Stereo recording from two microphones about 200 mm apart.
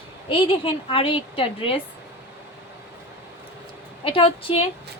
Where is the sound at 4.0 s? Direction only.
25° left (ahead or behind).